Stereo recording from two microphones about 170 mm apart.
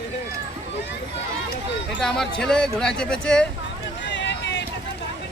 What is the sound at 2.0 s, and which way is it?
Speech, 5° left (ahead or behind).